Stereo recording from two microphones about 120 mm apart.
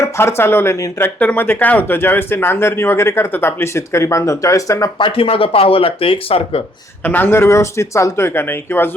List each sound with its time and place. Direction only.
0.0 s speech: 20° left (ahead or behind)
4.9 s speech: 45° left (ahead or behind)
7.0 s speech: 15° left (ahead or behind)